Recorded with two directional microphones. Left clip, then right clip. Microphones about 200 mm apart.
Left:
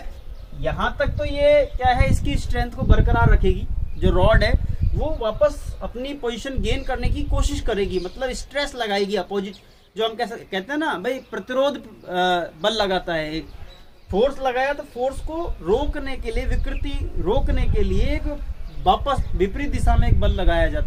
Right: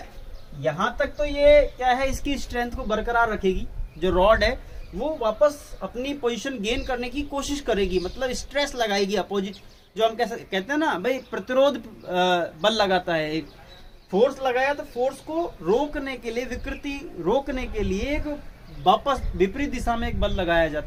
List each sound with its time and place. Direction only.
0.6 s a man's voice: 10° right (ahead or behind)